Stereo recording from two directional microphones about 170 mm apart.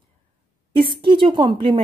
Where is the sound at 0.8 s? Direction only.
30° right (ahead or behind).